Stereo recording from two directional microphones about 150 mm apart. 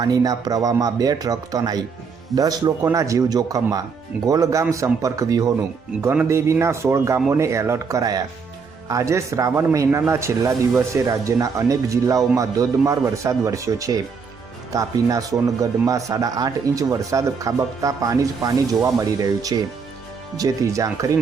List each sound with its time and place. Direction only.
0.0 s speech: 25° right (ahead or behind)